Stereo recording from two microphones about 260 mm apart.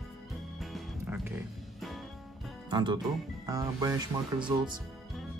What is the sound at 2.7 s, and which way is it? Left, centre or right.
Speech, centre.